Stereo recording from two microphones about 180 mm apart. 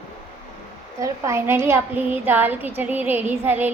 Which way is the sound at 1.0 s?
15° right (ahead or behind).